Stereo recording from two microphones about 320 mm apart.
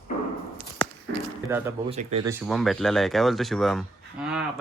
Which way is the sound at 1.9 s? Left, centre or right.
Centre.